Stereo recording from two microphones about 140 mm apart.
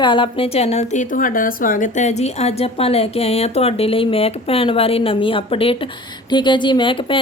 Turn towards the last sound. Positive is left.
turn(degrees=35)  # may be behind; listen again after turning